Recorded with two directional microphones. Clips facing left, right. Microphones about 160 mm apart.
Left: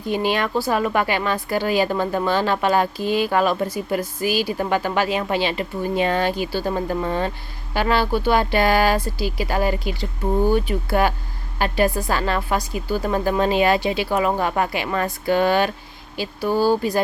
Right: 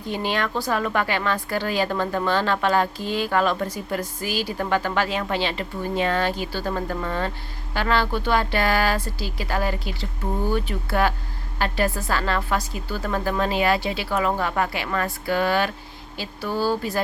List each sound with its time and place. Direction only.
0.1 s a woman's voice: 10° left (ahead or behind)